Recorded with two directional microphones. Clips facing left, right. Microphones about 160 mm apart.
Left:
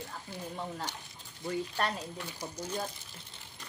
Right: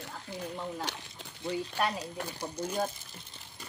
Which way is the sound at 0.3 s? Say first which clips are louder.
Right 5 dB; 15° right (ahead or behind).